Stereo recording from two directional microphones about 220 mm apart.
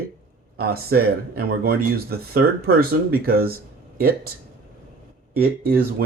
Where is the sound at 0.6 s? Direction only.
45° right (ahead or behind).